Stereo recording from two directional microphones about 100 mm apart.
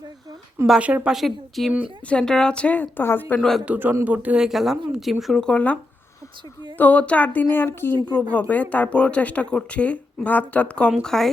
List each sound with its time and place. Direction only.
0.8 s a woman's voice: 15° right (ahead or behind); by 3.4 s 20° left (ahead or behind)
3.7 s a woman's voice: 15° right (ahead or behind); by 11.3 s 5° left (ahead or behind)